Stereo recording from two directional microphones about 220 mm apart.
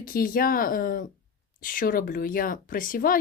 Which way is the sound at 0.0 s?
40° left (ahead or behind).